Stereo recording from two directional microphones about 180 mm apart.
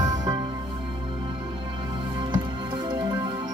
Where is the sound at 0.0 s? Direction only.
20° right (ahead or behind).